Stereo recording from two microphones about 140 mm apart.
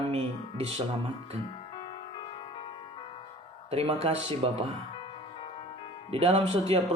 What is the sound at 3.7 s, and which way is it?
Speech, 45° right (ahead or behind).